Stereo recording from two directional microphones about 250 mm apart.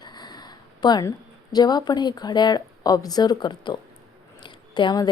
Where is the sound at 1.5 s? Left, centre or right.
Centre.